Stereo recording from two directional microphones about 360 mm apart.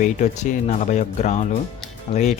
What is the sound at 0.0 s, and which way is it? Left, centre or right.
Speech, centre.